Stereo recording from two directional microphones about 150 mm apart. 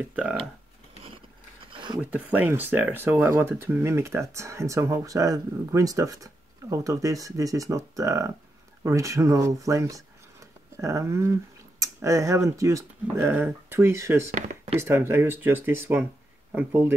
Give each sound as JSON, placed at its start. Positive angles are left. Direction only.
{"t": 0.1, "sound": "speech", "side_deg": -5}
{"t": 1.7, "sound": "a sound", "side_deg": -30}
{"t": 2.0, "sound": "speech", "side_deg": -10}